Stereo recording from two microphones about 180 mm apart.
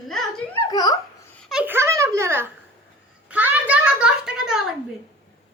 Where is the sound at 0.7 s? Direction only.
20° left (ahead or behind).